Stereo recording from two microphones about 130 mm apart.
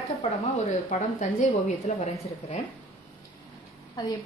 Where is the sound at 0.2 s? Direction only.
65° left (ahead or behind).